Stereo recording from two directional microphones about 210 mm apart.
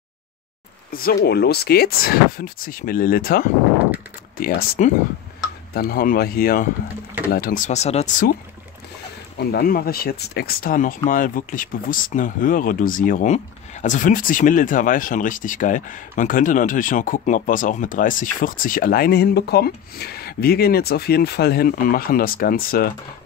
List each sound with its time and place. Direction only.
0.9 s speech: 45° left (ahead or behind)
9.4 s speech: 45° left (ahead or behind)